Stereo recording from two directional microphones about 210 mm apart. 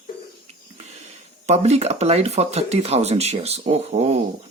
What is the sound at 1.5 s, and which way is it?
Speech, 30° right (ahead or behind).